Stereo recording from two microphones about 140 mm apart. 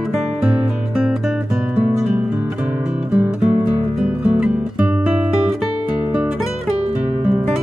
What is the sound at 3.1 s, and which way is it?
Music, 10° right (ahead or behind).